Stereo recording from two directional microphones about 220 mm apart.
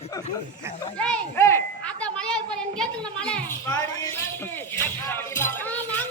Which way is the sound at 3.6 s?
15° left (ahead or behind).